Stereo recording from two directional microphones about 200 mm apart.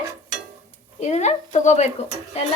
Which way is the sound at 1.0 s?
35° left (ahead or behind).